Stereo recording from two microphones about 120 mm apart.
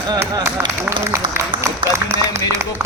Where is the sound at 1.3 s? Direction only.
20° right (ahead or behind).